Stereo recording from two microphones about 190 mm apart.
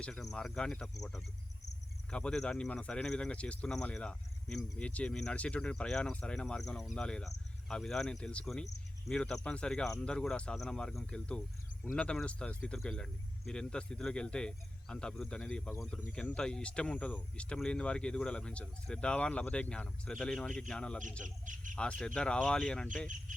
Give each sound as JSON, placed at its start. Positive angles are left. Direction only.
{"t": 0.0, "sound": "speech", "side_deg": 0}
{"t": 21.2, "sound": "speech", "side_deg": -45}
{"t": 21.8, "sound": "speech", "side_deg": 5}